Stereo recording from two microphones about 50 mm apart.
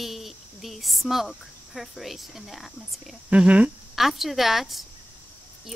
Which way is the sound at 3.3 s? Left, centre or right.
Right.